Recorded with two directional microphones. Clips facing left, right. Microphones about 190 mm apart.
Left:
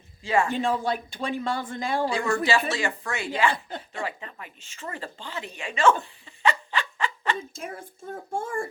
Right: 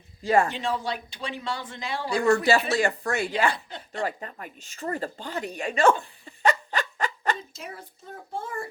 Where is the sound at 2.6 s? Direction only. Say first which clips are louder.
Right 4 dB; 35° right (ahead or behind).